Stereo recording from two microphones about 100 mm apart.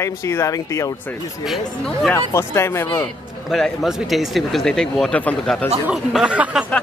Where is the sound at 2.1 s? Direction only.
25° left (ahead or behind).